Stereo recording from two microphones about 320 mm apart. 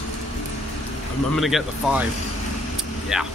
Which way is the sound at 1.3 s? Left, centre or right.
Centre.